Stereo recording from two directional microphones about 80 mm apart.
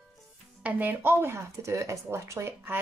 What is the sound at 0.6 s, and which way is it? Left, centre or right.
Speech, right.